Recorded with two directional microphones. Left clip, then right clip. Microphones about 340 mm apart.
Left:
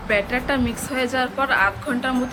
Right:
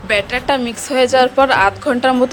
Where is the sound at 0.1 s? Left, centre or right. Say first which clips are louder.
Right 5 dB; centre.